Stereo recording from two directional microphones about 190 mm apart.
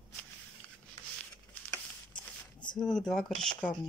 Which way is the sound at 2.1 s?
25° left (ahead or behind).